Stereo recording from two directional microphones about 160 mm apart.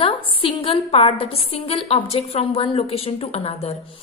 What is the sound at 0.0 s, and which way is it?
A woman's voice, 35° left (ahead or behind).